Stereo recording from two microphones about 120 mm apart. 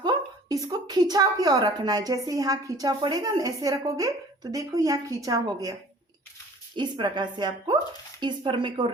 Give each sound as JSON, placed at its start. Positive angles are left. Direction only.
{"t": 0.0, "sound": "a woman's voice", "side_deg": -35}
{"t": 6.7, "sound": "a woman's voice", "side_deg": -40}